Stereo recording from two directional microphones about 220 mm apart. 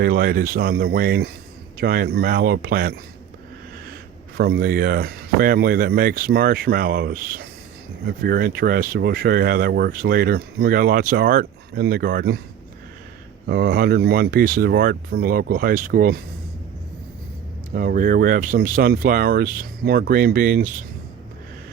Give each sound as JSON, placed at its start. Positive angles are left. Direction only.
{"t": 0.0, "sound": "speech", "side_deg": -40}
{"t": 4.4, "sound": "speech", "side_deg": -45}
{"t": 13.5, "sound": "speech", "side_deg": -45}
{"t": 17.7, "sound": "speech", "side_deg": -40}